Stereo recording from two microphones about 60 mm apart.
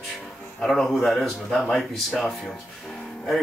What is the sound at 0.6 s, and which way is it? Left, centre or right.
Speech, centre.